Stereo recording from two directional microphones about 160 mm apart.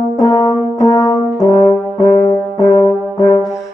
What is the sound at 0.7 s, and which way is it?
French horn, 20° left (ahead or behind).